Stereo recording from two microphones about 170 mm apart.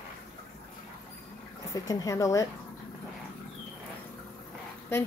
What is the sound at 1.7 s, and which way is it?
Speech, 20° left (ahead or behind).